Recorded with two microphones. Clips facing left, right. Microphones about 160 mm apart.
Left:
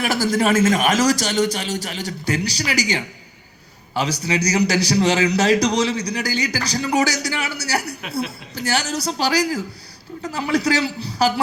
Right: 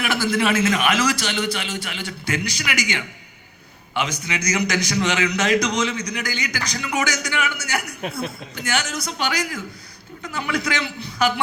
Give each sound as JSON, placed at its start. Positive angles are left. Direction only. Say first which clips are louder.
{"t": 0.0, "sound": "a man's voice", "louder": "left 2 dB", "side_deg": 40}